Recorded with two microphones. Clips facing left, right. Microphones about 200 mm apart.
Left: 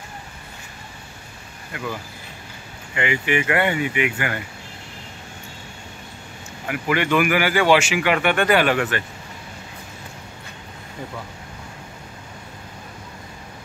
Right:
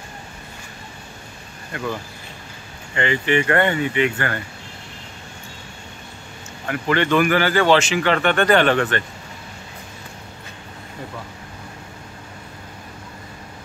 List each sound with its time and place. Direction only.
2.9 s speech: 10° left (ahead or behind)
6.7 s speech: 10° left (ahead or behind)